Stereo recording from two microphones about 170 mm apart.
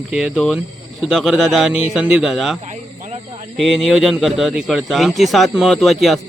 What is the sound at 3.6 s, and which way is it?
Speech, centre (ahead or behind).